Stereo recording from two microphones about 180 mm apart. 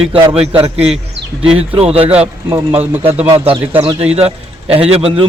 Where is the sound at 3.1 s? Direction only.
30° right (ahead or behind).